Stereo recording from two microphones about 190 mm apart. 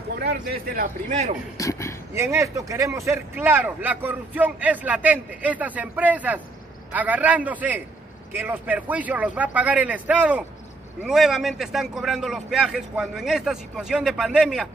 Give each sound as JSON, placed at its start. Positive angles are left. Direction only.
{"t": 0.1, "sound": "speech", "side_deg": -55}
{"t": 1.6, "sound": "speech", "side_deg": 15}
{"t": 2.1, "sound": "a man's voice", "side_deg": -15}